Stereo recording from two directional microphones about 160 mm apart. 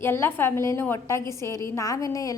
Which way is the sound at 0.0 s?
15° left (ahead or behind).